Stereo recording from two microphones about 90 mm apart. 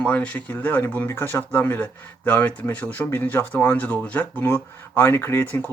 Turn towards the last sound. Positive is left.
turn(degrees=20)  # may be behind; listen again after turning